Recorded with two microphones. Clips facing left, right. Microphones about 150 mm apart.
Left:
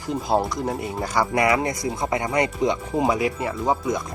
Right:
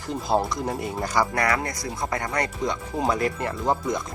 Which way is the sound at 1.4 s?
20° left (ahead or behind).